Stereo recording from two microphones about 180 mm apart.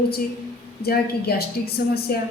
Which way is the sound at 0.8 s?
60° left (ahead or behind).